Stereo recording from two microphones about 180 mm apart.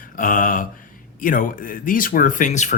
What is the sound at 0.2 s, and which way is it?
Speech, 50° left (ahead or behind).